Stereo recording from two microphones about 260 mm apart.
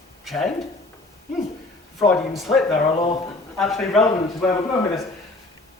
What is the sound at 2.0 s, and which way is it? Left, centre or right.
A man's voice, centre.